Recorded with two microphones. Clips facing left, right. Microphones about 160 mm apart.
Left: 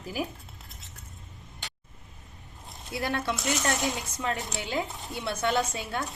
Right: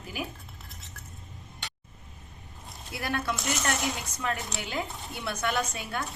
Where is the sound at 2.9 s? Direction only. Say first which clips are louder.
Left 2 dB; 25° left (ahead or behind).